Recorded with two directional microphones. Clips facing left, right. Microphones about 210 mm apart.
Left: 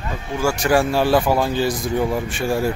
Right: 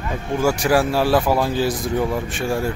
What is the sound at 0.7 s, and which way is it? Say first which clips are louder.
A man's voice: left 2 dB; centre (ahead or behind).